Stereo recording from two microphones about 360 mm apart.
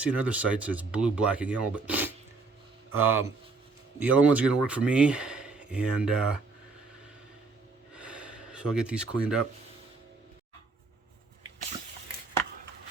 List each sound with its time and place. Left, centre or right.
0.0 s speech: centre
2.9 s speech: right
4.0 s speech: centre
7.9 s gasp: centre